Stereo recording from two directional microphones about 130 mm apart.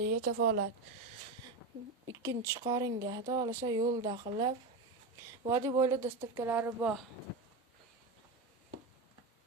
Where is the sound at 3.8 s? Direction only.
40° right (ahead or behind).